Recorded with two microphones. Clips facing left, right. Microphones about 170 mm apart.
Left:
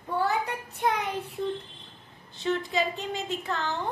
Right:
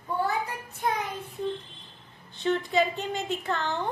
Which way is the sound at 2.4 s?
Centre (ahead or behind).